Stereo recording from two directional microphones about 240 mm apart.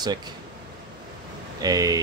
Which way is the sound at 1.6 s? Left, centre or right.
Centre.